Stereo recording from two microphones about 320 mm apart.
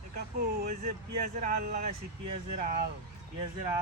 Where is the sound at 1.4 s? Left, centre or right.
Right.